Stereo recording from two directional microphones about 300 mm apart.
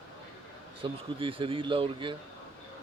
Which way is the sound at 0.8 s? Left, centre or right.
Centre.